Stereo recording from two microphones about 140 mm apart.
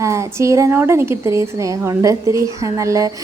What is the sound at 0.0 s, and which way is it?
A woman's voice, 20° right (ahead or behind).